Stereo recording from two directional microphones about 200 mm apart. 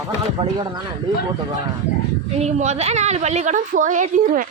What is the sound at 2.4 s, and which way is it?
A woman's voice, 35° right (ahead or behind).